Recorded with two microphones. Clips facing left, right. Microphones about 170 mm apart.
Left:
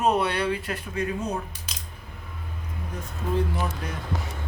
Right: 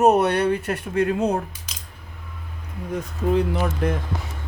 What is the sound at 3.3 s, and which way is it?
Speech, 70° right (ahead or behind).